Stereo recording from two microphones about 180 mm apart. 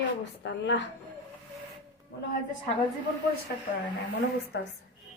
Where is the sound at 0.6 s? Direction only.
75° left (ahead or behind).